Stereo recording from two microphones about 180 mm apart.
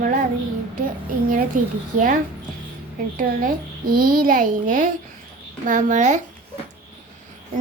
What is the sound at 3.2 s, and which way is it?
A woman's voice, 50° right (ahead or behind).